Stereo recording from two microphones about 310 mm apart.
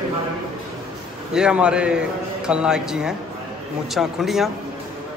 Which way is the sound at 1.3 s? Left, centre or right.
Centre.